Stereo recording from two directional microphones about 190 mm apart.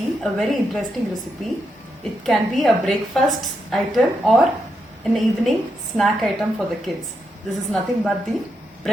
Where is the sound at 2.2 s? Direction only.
Centre (ahead or behind).